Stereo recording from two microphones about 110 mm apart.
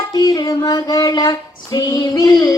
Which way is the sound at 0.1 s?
35° left (ahead or behind).